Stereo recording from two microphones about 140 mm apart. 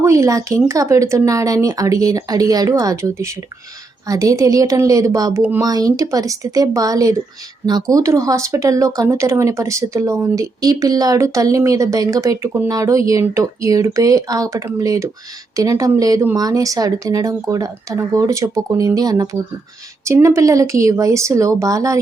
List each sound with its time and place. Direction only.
0.0 s speech: 20° right (ahead or behind)
5.6 s speech: 25° right (ahead or behind)